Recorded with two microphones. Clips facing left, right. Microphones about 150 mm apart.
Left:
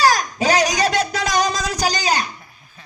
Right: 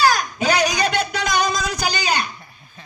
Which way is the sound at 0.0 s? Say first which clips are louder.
Left 1 dB; 35° left (ahead or behind).